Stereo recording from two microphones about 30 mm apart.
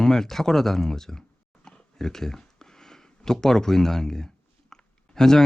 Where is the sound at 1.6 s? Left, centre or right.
Centre.